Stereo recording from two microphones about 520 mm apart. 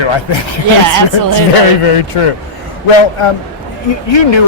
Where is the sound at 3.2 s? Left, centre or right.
Left.